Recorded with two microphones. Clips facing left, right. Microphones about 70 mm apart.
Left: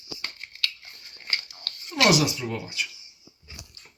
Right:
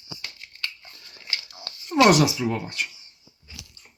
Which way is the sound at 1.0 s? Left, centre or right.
Right.